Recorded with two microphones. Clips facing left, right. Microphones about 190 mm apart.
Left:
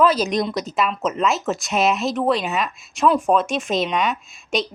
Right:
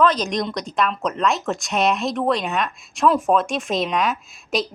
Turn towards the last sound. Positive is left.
turn(degrees=0)  # may be behind; listen again after turning